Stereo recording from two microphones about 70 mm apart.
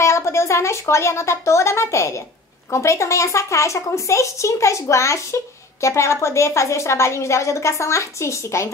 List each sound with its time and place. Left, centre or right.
0.0 s a woman's voice: left